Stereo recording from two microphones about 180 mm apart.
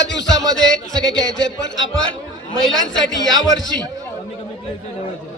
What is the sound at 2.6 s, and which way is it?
Speech, centre (ahead or behind).